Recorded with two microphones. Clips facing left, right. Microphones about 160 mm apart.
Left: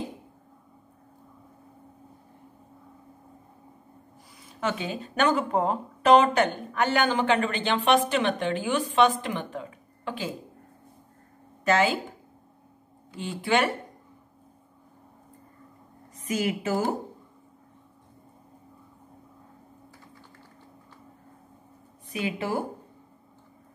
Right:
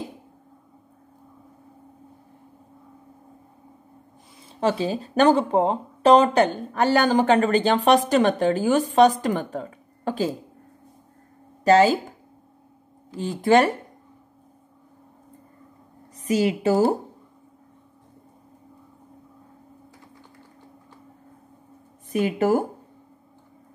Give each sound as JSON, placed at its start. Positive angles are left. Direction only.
{"t": 4.6, "sound": "speech", "side_deg": -35}
{"t": 11.6, "sound": "speech", "side_deg": -35}
{"t": 13.1, "sound": "speech", "side_deg": -40}
{"t": 16.2, "sound": "speech", "side_deg": -35}
{"t": 22.1, "sound": "speech", "side_deg": -45}